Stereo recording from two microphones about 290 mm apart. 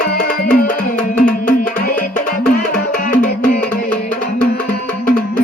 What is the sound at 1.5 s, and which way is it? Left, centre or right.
Music, left.